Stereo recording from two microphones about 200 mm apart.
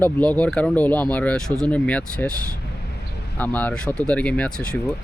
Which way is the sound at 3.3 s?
10° left (ahead or behind).